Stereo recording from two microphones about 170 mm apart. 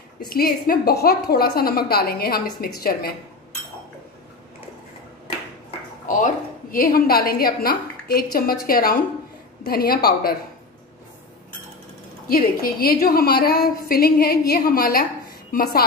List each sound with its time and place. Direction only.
0.3 s a woman's voice: 60° left (ahead or behind)
6.0 s a woman's voice: 50° left (ahead or behind)
12.3 s a woman's voice: 60° left (ahead or behind)